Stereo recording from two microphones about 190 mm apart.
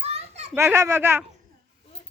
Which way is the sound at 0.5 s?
15° right (ahead or behind).